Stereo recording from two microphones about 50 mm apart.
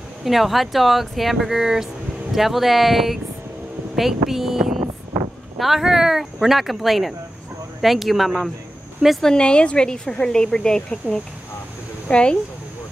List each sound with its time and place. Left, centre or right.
0.2 s speech: centre
5.1 s a sound: right
5.6 s speech: centre
9.2 s a woman's voice: centre